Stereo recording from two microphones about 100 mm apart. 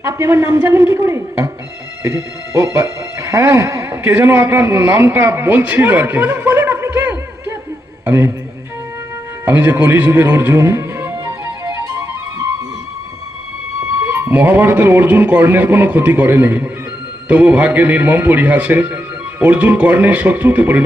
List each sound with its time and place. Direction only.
0.0 s a man's voice: 30° right (ahead or behind)
4.0 s a man's voice: 15° right (ahead or behind)
9.5 s music: 20° right (ahead or behind)
14.0 s speech: 20° right (ahead or behind)